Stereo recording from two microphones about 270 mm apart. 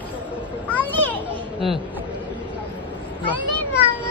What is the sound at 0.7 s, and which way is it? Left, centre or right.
Children playing, centre.